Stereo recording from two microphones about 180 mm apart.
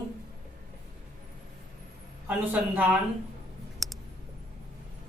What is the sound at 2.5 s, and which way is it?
Speech, 10° right (ahead or behind).